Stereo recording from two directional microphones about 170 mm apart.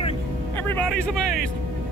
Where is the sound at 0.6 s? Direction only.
10° left (ahead or behind).